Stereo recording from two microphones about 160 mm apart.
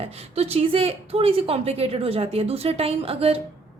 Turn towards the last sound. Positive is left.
turn(degrees=-35)  # may be behind; listen again after turning